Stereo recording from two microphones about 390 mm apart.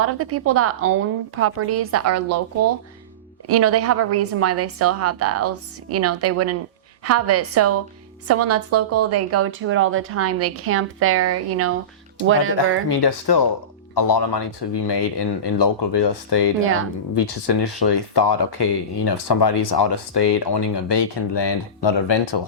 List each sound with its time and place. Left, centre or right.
0.0 s a woman's voice: right
3.4 s a woman's voice: right
12.9 s speech: left
14.1 s speech: left